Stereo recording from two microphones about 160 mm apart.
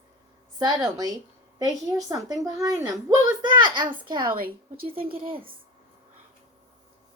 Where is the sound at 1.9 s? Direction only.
20° right (ahead or behind).